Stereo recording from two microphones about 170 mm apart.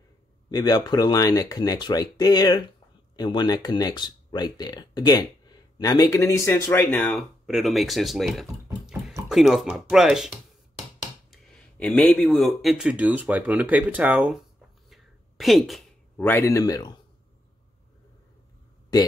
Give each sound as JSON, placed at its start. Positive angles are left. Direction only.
{"t": 0.5, "sound": "speech", "side_deg": 25}
{"t": 14.9, "sound": "a sound", "side_deg": 0}
{"t": 16.2, "sound": "speech", "side_deg": 10}